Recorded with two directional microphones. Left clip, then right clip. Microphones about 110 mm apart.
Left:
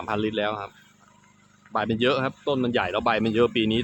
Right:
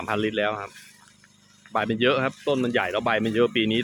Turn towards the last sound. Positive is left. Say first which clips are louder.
# even
turn(degrees=0)  # may be behind; listen again after turning